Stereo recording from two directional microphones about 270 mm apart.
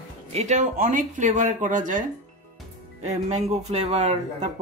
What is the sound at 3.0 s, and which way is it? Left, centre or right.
Speech, right.